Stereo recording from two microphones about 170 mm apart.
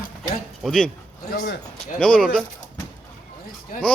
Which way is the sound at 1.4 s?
60° left (ahead or behind).